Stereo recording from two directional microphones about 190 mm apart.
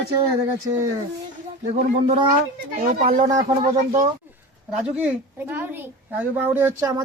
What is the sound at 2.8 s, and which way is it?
Speech, 45° right (ahead or behind).